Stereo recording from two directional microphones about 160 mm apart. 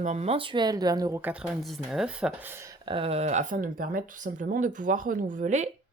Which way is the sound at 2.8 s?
35° right (ahead or behind).